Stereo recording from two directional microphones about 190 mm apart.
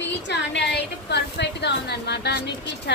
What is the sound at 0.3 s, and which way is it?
A woman's voice, 65° left (ahead or behind).